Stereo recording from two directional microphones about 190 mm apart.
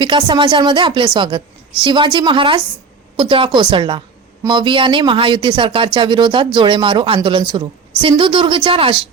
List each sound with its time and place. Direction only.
0.0 s speech: 25° right (ahead or behind)